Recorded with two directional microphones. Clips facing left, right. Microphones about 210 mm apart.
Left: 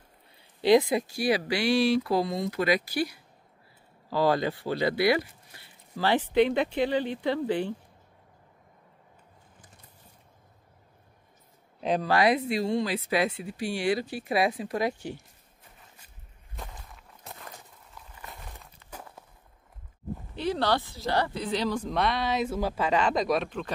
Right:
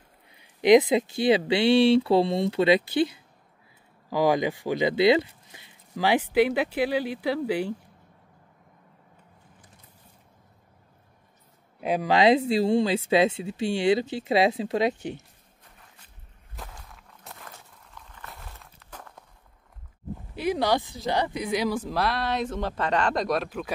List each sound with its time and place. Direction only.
0.4 s speech: 15° right (ahead or behind)
11.8 s speech: 10° right (ahead or behind)
12.1 s speech: 25° right (ahead or behind)
16.6 s whip: centre (ahead or behind)
16.9 s walk: centre (ahead or behind)
17.9 s a sound: 10° left (ahead or behind)
18.6 s a sound: 5° left (ahead or behind)
20.3 s a woman's voice: 10° right (ahead or behind)